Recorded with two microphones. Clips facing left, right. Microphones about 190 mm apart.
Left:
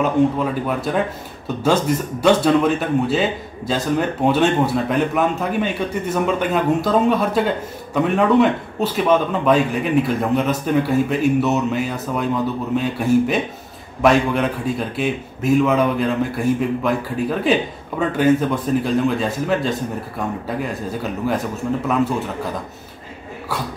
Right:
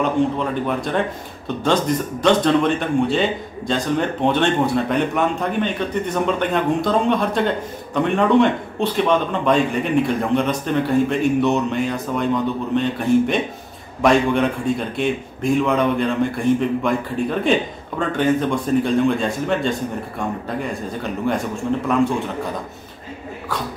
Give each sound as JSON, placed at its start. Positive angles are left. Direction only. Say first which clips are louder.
{"t": 0.0, "sound": "speech", "louder": "left 2 dB", "side_deg": 5}